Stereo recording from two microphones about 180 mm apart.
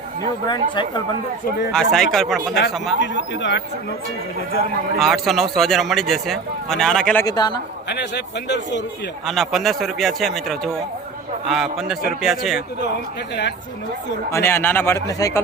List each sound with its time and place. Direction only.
0.4 s speech: 25° left (ahead or behind)
1.7 s speech: 5° left (ahead or behind)
3.0 s speech: 90° left
4.9 s speech: centre (ahead or behind)
7.3 s speech: 20° left (ahead or behind)
7.9 s a man's voice: 70° left (ahead or behind)
9.2 s speech: centre (ahead or behind)
12.8 s a man's voice: 70° left (ahead or behind)
14.3 s speech: 15° left (ahead or behind)